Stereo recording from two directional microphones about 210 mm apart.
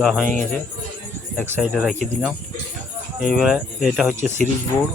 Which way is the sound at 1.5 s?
5° right (ahead or behind).